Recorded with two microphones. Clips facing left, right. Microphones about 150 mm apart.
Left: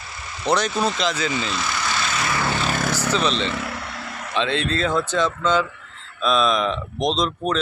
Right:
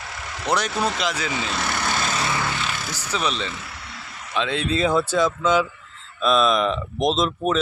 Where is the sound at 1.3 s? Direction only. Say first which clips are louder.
Left 1 dB; 65° right (ahead or behind); by 2.2 s 40° right (ahead or behind).